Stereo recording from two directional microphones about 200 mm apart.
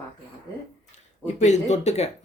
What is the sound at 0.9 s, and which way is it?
Speech, 35° left (ahead or behind).